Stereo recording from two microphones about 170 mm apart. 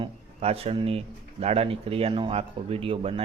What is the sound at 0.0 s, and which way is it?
Speech, 35° right (ahead or behind).